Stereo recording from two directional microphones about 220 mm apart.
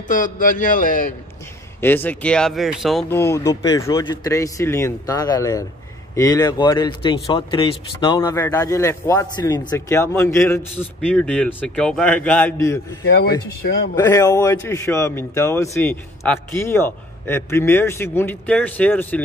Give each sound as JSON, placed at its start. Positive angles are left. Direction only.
{"t": 0.1, "sound": "a man's voice", "side_deg": 35}
{"t": 1.8, "sound": "speech", "side_deg": 10}
{"t": 3.1, "sound": "speech", "side_deg": 10}
{"t": 13.0, "sound": "speech", "side_deg": 45}
{"t": 13.9, "sound": "speech", "side_deg": 15}